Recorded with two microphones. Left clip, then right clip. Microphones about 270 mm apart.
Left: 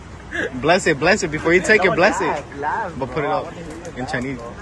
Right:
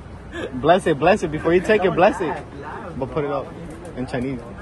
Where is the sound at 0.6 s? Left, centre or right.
Centre.